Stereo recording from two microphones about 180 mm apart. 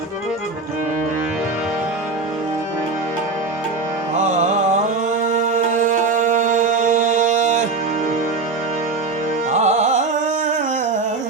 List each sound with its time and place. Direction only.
5.2 s music: 45° right (ahead or behind)
9.5 s music: 40° right (ahead or behind)